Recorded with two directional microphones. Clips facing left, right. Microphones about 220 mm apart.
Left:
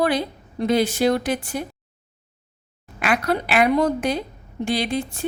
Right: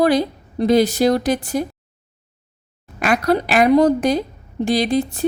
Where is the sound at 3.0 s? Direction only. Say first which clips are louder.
Right 5 dB; 40° right (ahead or behind).